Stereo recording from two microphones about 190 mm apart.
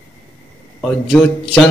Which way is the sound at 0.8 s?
Centre (ahead or behind).